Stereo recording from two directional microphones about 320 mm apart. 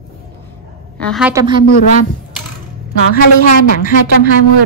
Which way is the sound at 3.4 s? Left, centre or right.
Left.